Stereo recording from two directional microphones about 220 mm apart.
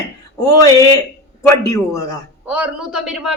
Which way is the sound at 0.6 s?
15° left (ahead or behind).